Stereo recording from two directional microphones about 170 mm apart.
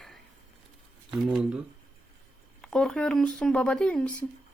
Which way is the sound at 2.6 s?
5° left (ahead or behind).